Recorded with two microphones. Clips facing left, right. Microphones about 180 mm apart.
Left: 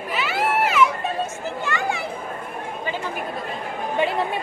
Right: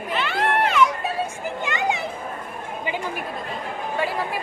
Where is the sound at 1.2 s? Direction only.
15° right (ahead or behind).